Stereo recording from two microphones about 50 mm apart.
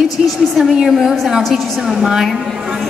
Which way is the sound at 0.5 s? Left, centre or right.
Centre.